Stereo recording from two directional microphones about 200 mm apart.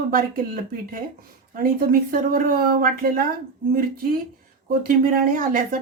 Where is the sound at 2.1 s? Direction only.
45° right (ahead or behind).